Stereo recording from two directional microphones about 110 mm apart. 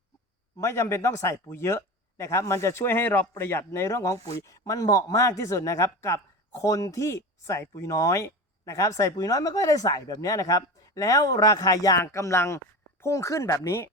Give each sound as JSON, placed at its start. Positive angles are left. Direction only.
{"t": 0.6, "sound": "a man's voice", "side_deg": 25}